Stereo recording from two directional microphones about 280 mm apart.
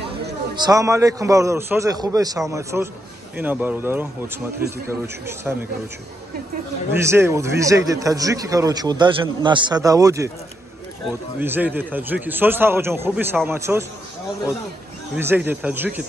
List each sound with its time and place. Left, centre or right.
0.6 s a man's voice: centre
6.9 s a man's voice: centre
11.3 s a man's voice: centre
15.1 s a man's voice: centre